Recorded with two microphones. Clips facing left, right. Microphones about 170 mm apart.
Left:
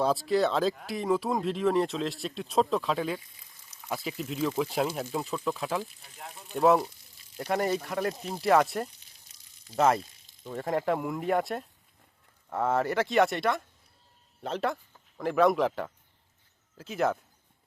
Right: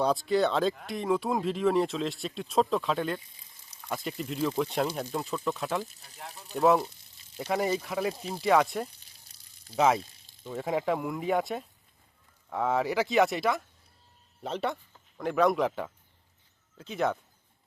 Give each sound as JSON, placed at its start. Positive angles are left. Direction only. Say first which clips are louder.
{"t": 0.0, "sound": "speech", "louder": "even", "side_deg": 0}
{"t": 3.2, "sound": "speech", "louder": "left 1 dB", "side_deg": -25}
{"t": 3.8, "sound": "speech", "louder": "even", "side_deg": 5}
{"t": 9.3, "sound": "a sound", "louder": "even", "side_deg": -30}
{"t": 9.7, "sound": "speech", "louder": "even", "side_deg": 0}